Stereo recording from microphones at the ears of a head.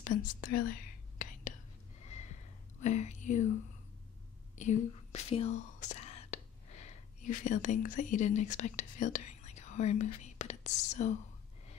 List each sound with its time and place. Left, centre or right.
0.0 s whispering: left
4.6 s speech: left